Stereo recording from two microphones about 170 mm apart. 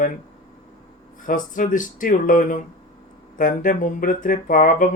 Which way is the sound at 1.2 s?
50° left (ahead or behind).